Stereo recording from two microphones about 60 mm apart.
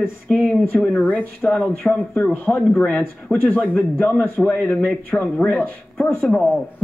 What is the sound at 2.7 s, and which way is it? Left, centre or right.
A man's voice, centre.